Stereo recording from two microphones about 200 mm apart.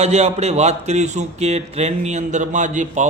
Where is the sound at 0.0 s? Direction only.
35° right (ahead or behind).